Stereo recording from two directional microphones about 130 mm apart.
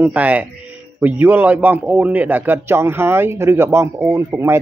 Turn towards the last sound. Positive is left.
turn(degrees=-20)  # may be behind; listen again after turning